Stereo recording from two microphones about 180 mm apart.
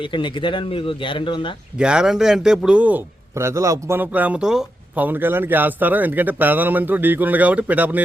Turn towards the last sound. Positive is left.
turn(degrees=-10)  # may be behind; listen again after turning